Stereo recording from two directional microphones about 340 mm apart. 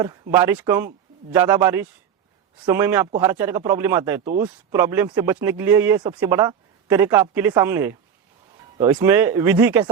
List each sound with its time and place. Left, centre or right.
0.0 s speech: centre